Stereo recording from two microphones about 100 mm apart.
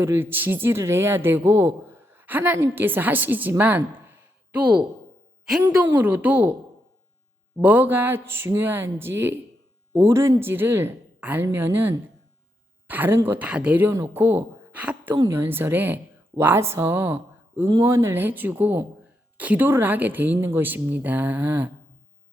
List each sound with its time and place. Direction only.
0.0 s a man's voice: 25° right (ahead or behind)
3.6 s a sound: 15° right (ahead or behind)
6.0 s speech: 15° right (ahead or behind)
7.6 s a man's voice: 15° right (ahead or behind)